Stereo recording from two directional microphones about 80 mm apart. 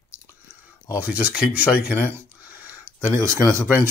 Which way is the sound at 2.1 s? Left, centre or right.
Right.